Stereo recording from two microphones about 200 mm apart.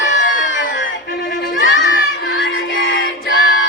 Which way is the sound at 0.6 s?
70° left (ahead or behind).